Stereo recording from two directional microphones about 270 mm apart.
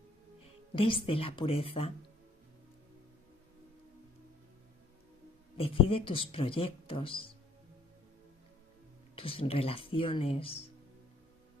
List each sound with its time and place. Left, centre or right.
0.7 s speech: centre
5.6 s speech: centre
9.1 s speech: left